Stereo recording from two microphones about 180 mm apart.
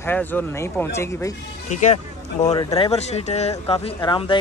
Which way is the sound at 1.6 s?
40° left (ahead or behind).